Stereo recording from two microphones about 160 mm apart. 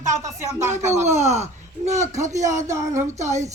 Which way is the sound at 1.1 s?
45° right (ahead or behind).